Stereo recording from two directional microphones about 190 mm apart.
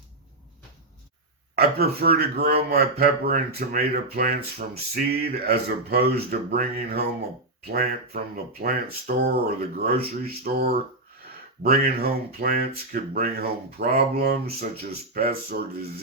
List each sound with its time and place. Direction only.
1.5 s a man's voice: 55° right (ahead or behind)